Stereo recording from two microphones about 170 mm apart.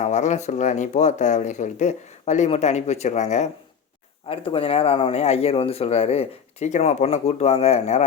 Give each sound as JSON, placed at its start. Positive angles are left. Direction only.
{"t": 0.0, "sound": "speech", "side_deg": 45}